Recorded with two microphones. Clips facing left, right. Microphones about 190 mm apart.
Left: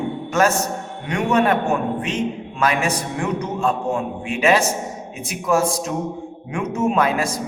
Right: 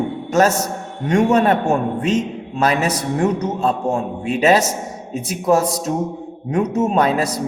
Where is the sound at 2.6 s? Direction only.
35° right (ahead or behind).